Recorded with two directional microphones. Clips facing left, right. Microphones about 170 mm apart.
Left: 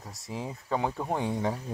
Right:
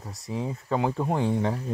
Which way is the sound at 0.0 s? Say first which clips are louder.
Right 4 dB; centre (ahead or behind).